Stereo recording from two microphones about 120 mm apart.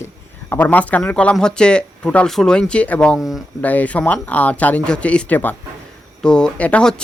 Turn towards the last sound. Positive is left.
turn(degrees=10)  # may be behind; listen again after turning